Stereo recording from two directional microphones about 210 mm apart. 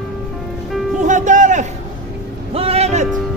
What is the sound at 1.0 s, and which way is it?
Music, 35° right (ahead or behind).